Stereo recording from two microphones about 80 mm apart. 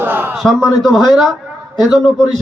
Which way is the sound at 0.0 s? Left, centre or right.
Right.